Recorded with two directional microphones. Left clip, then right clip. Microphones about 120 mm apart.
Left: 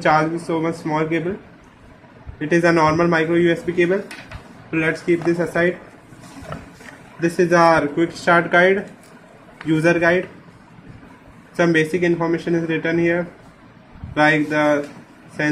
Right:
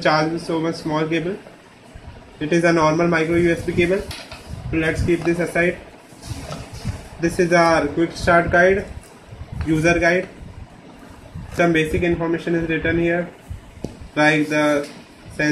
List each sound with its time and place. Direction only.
0.0 s a man's voice: 10° left (ahead or behind)
2.5 s a man's voice: 10° left (ahead or behind)
5.2 s a man's voice: 10° left (ahead or behind)
7.2 s a man's voice: 10° left (ahead or behind)
11.5 s a man's voice: 25° left (ahead or behind)
14.1 s a man's voice: 5° left (ahead or behind)